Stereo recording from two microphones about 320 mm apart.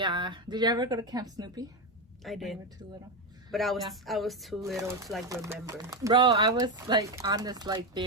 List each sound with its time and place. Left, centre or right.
0.0 s speech: centre
2.2 s speech: centre
5.3 s speech: centre